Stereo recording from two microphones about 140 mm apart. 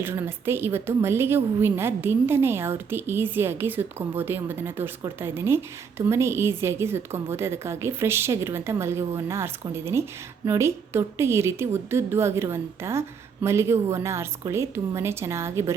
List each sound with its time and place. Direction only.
0.0 s a woman's voice: 15° right (ahead or behind)